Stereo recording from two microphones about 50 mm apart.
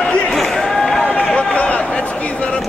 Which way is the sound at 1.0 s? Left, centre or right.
Left.